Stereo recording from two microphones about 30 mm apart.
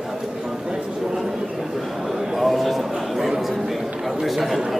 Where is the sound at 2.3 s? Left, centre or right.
Centre.